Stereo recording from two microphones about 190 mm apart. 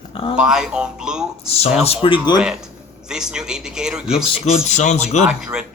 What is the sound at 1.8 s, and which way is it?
Speech, 30° left (ahead or behind).